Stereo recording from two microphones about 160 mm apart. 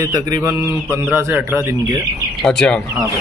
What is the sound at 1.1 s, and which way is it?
Speech, 15° right (ahead or behind).